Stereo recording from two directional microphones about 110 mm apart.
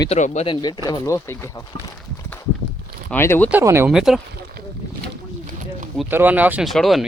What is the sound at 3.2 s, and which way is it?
Speech, 20° left (ahead or behind).